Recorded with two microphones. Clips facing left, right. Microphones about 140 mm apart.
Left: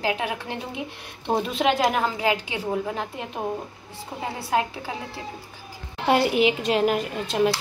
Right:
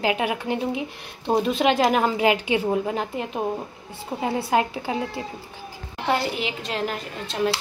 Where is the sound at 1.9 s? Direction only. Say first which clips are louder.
Right 4 dB; 15° right (ahead or behind).